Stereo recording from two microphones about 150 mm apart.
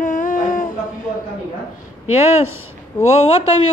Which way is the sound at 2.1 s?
45° left (ahead or behind).